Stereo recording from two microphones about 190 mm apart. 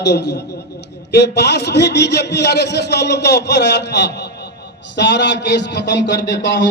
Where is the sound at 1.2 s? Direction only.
60° left (ahead or behind).